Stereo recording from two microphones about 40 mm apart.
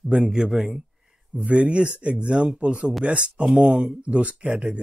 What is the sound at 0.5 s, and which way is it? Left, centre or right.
Speech, centre.